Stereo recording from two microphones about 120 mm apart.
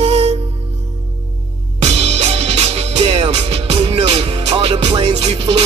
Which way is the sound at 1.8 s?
60° right (ahead or behind).